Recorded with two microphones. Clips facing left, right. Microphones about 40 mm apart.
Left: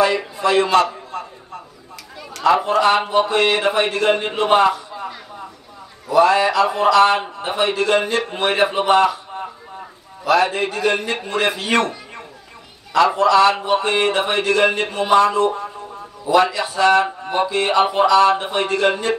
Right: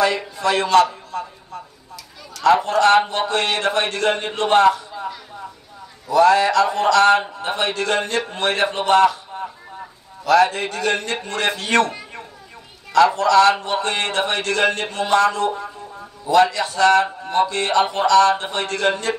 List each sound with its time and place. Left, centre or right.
0.0 s speech: centre
0.8 s a sound: left
2.4 s a man's voice: centre
7.7 s speech: centre
10.2 s speech: centre
12.9 s speech: centre
15.4 s speech: left
16.3 s speech: centre